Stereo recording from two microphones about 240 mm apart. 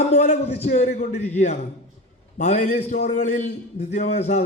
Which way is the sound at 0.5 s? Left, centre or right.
Left.